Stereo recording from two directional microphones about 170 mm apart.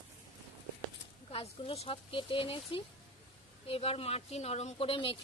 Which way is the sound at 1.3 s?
35° left (ahead or behind).